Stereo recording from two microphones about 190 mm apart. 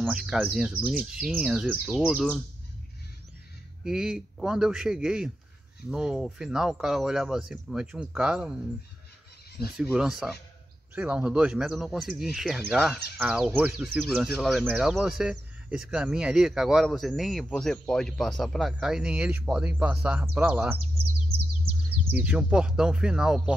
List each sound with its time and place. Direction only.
0.0 s speech: 5° right (ahead or behind)
3.8 s speech: 5° right (ahead or behind)
9.8 s speech: 5° right (ahead or behind)
22.1 s speech: 5° right (ahead or behind)